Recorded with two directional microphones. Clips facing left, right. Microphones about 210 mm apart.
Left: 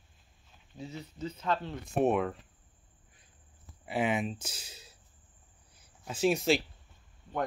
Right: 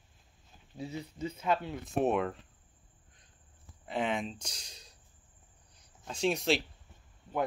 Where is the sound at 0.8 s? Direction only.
10° right (ahead or behind).